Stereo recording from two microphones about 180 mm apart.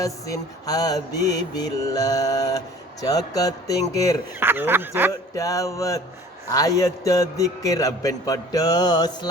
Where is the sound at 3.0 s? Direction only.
20° left (ahead or behind).